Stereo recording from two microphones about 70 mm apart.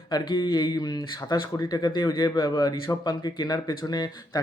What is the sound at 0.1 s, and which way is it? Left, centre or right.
Speech, left.